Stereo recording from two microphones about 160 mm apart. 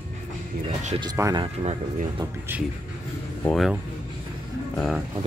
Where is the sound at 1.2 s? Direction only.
20° right (ahead or behind).